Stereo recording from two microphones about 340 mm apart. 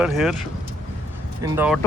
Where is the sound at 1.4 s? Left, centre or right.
Centre.